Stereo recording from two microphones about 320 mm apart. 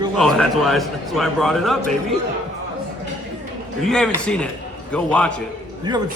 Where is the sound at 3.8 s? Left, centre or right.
Centre.